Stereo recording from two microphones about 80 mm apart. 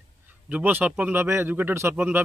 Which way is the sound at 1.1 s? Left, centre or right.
Right.